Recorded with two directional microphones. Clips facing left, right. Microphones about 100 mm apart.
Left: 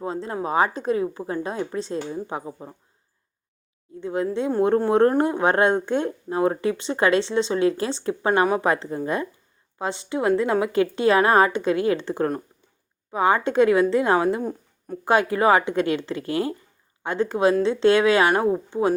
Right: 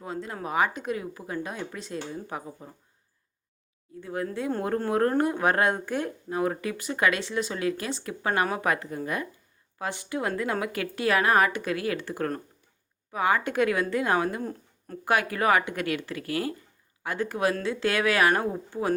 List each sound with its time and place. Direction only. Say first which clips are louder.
0.0 s a woman's voice: left 7 dB; 30° left (ahead or behind)
4.0 s speech: left 6 dB; 20° left (ahead or behind)